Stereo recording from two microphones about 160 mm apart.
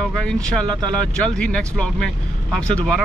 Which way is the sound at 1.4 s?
5° left (ahead or behind).